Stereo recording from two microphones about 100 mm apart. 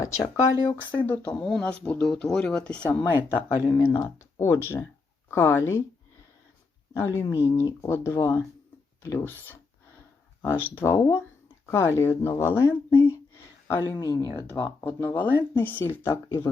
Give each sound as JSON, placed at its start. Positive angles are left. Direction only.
{"t": 0.0, "sound": "speech", "side_deg": 30}
{"t": 1.0, "sound": "speech", "side_deg": 15}
{"t": 3.0, "sound": "speech", "side_deg": 20}
{"t": 6.9, "sound": "speech", "side_deg": 25}